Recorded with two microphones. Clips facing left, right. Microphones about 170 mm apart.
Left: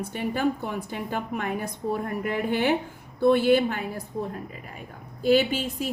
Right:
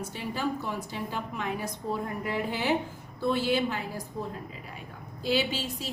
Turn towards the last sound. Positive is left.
turn(degrees=50)  # may be behind; listen again after turning